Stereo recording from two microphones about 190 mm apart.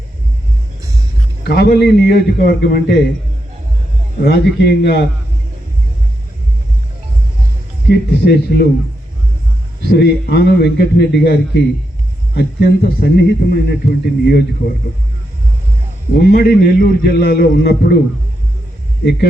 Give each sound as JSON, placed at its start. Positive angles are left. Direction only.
{"t": 1.5, "sound": "a man's voice", "side_deg": 55}
{"t": 4.2, "sound": "a man's voice", "side_deg": 60}
{"t": 7.9, "sound": "a man's voice", "side_deg": 55}
{"t": 9.8, "sound": "a man's voice", "side_deg": 60}
{"t": 16.1, "sound": "a man's voice", "side_deg": 55}